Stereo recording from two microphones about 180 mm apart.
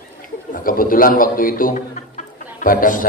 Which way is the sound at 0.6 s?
50° left (ahead or behind).